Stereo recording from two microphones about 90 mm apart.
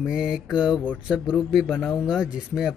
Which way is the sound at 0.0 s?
10° right (ahead or behind).